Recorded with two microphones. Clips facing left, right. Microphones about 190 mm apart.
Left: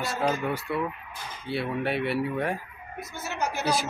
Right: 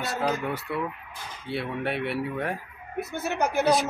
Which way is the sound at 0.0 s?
Centre (ahead or behind).